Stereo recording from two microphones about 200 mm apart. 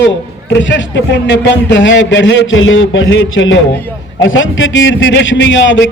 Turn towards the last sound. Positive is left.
turn(degrees=65)  # may be behind; listen again after turning